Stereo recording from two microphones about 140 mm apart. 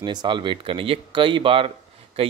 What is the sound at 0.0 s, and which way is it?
Speech, 30° right (ahead or behind).